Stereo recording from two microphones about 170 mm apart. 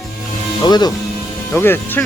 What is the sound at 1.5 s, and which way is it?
Speech, 10° left (ahead or behind).